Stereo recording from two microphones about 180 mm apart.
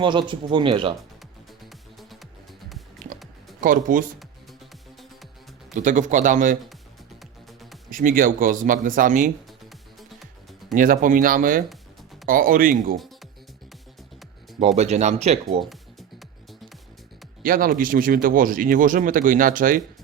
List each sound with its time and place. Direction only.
0.0 s speech: 25° right (ahead or behind)
3.0 s music: 50° right (ahead or behind)
3.6 s speech: 50° right (ahead or behind)
5.7 s speech: 45° right (ahead or behind)
7.9 s speech: 50° right (ahead or behind)
10.8 s speech: 50° right (ahead or behind)
14.8 s speech: 40° right (ahead or behind)
17.4 s speech: 50° right (ahead or behind)